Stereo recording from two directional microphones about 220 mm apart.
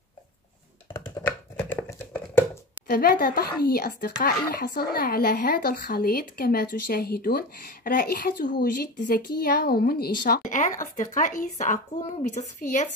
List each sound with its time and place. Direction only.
0.9 s computer keyboard: 10° left (ahead or behind)
2.9 s speech: 40° left (ahead or behind)